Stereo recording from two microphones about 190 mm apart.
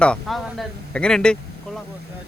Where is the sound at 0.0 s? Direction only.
5° left (ahead or behind).